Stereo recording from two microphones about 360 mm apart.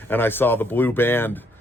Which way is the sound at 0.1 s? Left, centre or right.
Centre.